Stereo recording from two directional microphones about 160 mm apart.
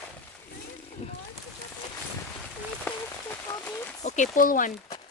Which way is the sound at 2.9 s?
10° left (ahead or behind).